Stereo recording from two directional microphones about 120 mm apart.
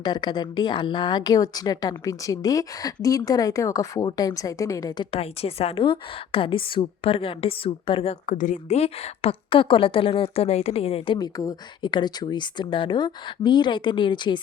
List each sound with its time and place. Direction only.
0.0 s a woman's voice: 35° left (ahead or behind)
5.1 s a woman's voice: 55° left (ahead or behind)
8.3 s a woman's voice: 90° left; by 11.2 s 50° left (ahead or behind)
11.2 s a woman's voice: 30° left (ahead or behind)